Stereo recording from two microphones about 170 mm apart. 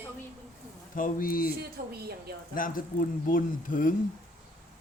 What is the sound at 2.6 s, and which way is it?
Speech, 55° left (ahead or behind).